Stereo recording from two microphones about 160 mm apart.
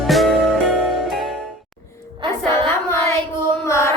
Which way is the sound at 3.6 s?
15° left (ahead or behind).